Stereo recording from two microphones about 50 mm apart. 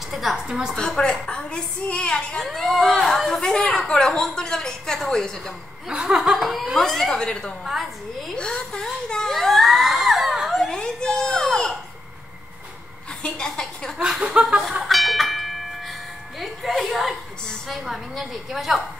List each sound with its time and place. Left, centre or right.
0.1 s a woman's voice: centre
0.5 s laughter: centre
0.7 s a woman's voice: centre
2.4 s a woman's voice: centre
5.9 s laughter: centre
6.3 s speech: centre
7.6 s speech: centre
8.4 s speech: centre
9.1 s a sound: centre
10.7 s a sound: centre
13.2 s a woman's voice: centre
14.0 s laughter: centre
14.6 s tubular bells: centre
17.6 s speech: centre